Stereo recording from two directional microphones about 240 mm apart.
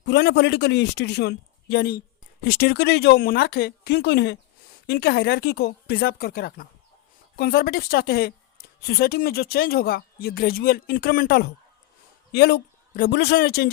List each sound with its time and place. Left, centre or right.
0.0 s a man's voice: left